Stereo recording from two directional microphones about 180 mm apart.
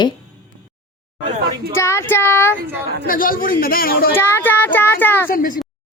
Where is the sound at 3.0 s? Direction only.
50° left (ahead or behind).